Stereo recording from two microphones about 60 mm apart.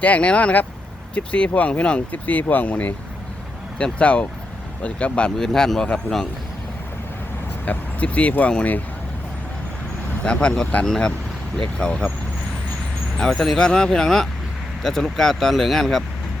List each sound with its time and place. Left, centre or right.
0.0 s speech: left
5.4 s speech: centre
7.6 s speech: left
10.2 s speech: centre
13.1 s speech: centre